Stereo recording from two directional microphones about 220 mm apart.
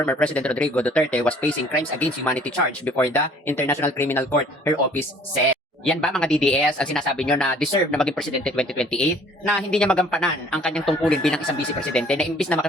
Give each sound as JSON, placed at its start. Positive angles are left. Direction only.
{"t": 0.0, "sound": "speech", "side_deg": 5}